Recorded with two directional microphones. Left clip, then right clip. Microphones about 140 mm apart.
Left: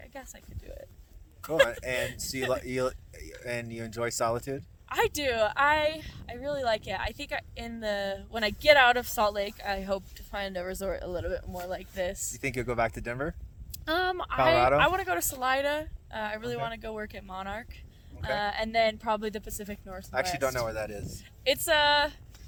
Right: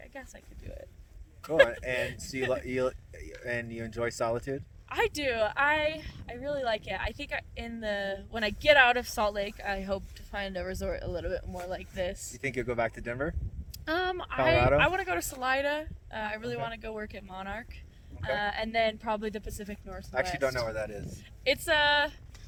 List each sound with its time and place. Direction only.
1.7 s speech: 10° right (ahead or behind)
4.9 s a woman's voice: 30° left (ahead or behind)
12.4 s speech: 10° right (ahead or behind)
13.8 s a woman's voice: 25° left (ahead or behind)
20.1 s speech: 10° right (ahead or behind)
21.4 s a woman's voice: 25° left (ahead or behind)